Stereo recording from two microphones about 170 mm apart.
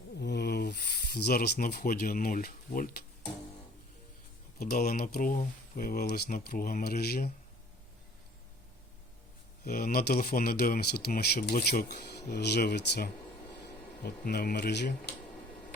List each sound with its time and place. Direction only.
0.2 s a sound: 80° left
1.0 s speech: 65° left (ahead or behind)
4.6 s speech: 60° left (ahead or behind)
9.6 s speech: 60° left (ahead or behind); by 15.1 s 85° left